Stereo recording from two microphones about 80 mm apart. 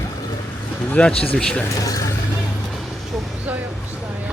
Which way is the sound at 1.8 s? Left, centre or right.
Left.